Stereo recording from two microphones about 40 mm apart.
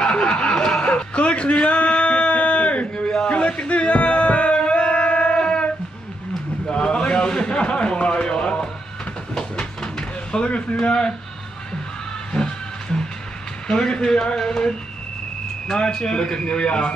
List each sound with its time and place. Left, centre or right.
0.0 s snicker: left
0.8 s a sound: left
3.3 s music: left
6.7 s a sound: left
10.8 s a man's voice: left
12.3 s music: left
13.7 s speech: centre
15.8 s a man's voice: left